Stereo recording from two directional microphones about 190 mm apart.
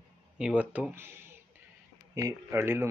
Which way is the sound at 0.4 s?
5° right (ahead or behind).